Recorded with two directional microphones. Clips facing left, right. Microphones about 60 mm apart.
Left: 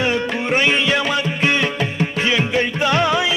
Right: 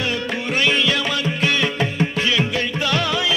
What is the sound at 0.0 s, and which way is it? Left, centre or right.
Music, left.